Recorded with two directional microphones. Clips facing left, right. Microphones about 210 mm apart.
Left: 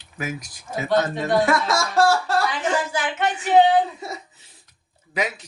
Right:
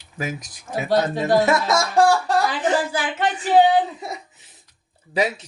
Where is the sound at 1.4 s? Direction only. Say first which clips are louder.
Right 2 dB; 20° right (ahead or behind).